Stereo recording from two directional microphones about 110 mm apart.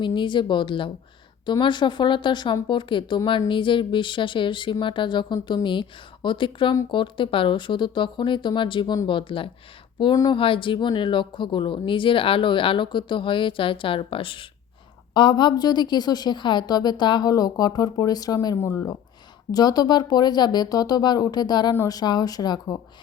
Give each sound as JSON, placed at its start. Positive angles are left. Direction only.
{"t": 0.0, "sound": "a woman's voice", "side_deg": 45}
{"t": 19.5, "sound": "a woman's voice", "side_deg": 35}